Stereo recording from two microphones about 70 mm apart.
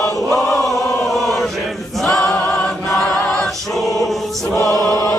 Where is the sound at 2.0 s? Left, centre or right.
Centre.